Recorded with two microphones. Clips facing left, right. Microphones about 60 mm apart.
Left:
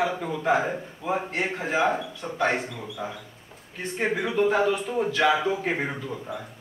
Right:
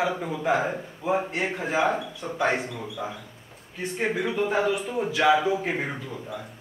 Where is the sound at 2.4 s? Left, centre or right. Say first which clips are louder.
Even; centre.